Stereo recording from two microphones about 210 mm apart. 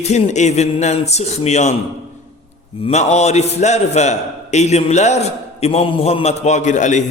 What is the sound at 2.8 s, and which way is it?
A man's voice, 30° left (ahead or behind).